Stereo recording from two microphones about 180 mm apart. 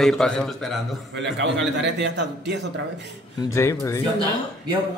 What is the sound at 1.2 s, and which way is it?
A man's voice, 75° right (ahead or behind).